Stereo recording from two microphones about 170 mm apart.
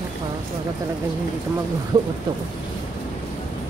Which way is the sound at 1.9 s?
25° right (ahead or behind).